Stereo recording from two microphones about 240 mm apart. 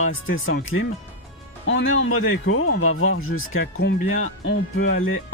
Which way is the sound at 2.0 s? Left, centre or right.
Left.